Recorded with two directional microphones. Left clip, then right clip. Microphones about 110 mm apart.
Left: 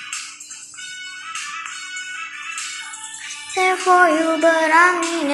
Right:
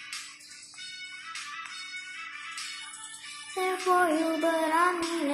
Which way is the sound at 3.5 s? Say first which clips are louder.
Left 11 dB; 10° right (ahead or behind).